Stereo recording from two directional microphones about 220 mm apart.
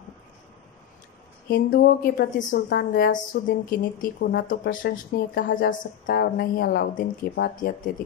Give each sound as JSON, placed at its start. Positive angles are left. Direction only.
{"t": 1.5, "sound": "a woman's voice", "side_deg": 40}